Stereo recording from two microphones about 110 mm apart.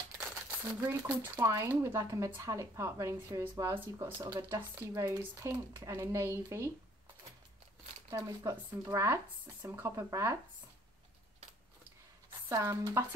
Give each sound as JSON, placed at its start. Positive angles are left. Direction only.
{"t": 0.5, "sound": "speech", "side_deg": -20}
{"t": 4.9, "sound": "speech", "side_deg": -30}
{"t": 8.1, "sound": "speech", "side_deg": -35}
{"t": 12.4, "sound": "speech", "side_deg": -25}